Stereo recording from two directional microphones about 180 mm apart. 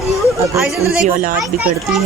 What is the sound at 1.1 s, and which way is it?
Speech, 50° right (ahead or behind).